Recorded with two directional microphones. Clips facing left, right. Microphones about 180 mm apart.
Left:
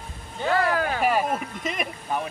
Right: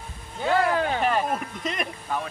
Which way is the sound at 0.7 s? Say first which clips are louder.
Right 1 dB; 25° right (ahead or behind).